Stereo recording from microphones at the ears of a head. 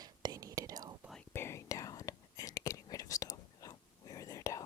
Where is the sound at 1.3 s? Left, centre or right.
Left.